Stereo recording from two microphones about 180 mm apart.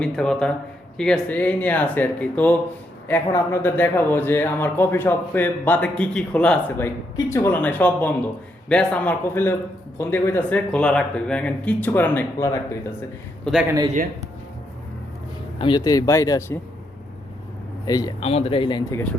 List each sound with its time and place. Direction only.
0.0 s speech: 5° left (ahead or behind)
13.4 s speech: 5° right (ahead or behind)
13.9 s speech: 45° right (ahead or behind)
15.5 s speech: 25° left (ahead or behind)
17.8 s speech: 20° left (ahead or behind)
18.3 s speech: 30° left (ahead or behind)
18.9 s speech: 10° left (ahead or behind)